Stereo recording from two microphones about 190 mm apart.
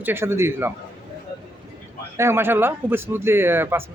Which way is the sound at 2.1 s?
15° right (ahead or behind).